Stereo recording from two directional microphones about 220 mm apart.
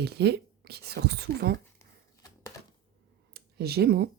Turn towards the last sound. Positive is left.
turn(degrees=-45)  # may be behind; listen again after turning